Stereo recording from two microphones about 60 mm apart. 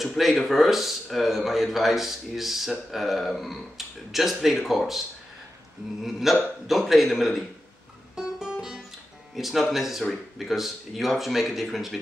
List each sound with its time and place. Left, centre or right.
0.0 s a man's voice: centre
6.0 s a man's voice: centre
8.2 s music: centre
9.3 s a man's voice: centre